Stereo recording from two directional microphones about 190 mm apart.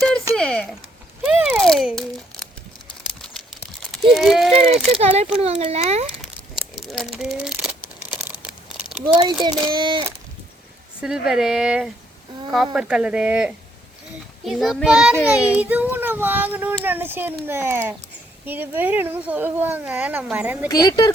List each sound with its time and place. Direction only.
0.3 s a sound: 5° left (ahead or behind)
4.9 s a child's voice: 35° right (ahead or behind)
6.7 s a sound: centre (ahead or behind)
9.1 s speech: 25° right (ahead or behind)
11.0 s a child's voice: 5° right (ahead or behind)
20.7 s speech: 20° left (ahead or behind)